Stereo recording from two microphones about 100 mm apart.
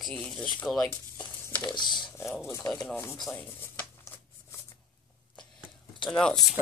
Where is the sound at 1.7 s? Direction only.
50° left (ahead or behind).